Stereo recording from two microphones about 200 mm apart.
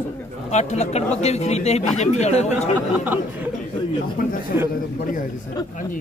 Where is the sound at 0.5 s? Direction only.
35° left (ahead or behind).